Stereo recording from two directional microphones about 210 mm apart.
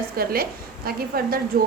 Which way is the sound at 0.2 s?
45° right (ahead or behind).